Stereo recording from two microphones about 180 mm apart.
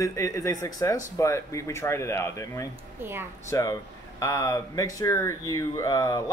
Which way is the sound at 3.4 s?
20° left (ahead or behind).